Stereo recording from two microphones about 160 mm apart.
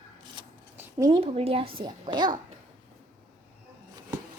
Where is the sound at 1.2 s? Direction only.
40° right (ahead or behind).